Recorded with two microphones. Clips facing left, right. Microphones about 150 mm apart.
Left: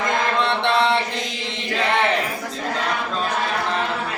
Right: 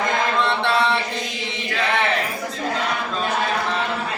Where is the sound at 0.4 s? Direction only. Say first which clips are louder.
Left 1 dB; 20° left (ahead or behind).